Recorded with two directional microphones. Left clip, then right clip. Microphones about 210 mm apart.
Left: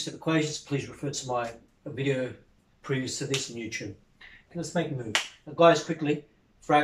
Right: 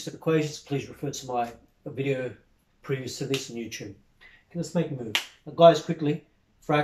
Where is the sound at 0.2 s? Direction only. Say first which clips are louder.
Right 2 dB; 5° right (ahead or behind).